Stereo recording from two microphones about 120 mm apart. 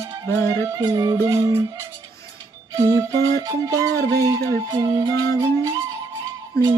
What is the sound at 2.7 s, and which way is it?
Music, 25° right (ahead or behind).